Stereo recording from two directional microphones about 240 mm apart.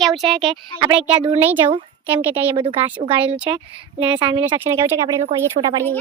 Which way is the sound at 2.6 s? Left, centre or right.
Centre.